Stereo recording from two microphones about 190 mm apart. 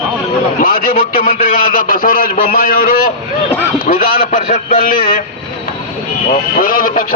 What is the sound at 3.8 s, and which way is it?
A man's voice, 45° left (ahead or behind).